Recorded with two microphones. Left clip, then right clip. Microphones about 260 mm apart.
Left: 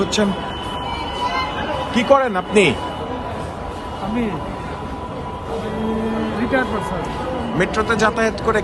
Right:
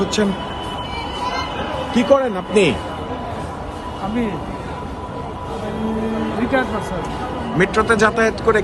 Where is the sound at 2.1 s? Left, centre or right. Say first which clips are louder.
Left 2 dB; left.